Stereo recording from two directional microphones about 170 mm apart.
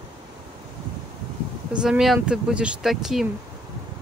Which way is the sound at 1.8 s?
Centre (ahead or behind).